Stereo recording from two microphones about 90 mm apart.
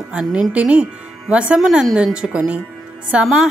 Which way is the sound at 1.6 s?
Centre (ahead or behind).